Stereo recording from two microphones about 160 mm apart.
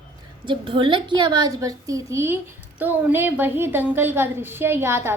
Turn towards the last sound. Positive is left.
turn(degrees=-15)  # may be behind; listen again after turning